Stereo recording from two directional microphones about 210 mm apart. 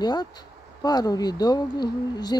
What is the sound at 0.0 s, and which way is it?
Speech, 20° left (ahead or behind).